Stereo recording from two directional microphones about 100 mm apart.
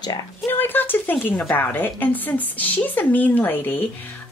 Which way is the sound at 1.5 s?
20° left (ahead or behind).